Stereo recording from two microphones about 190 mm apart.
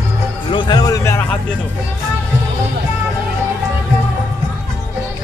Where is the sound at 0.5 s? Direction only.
25° left (ahead or behind).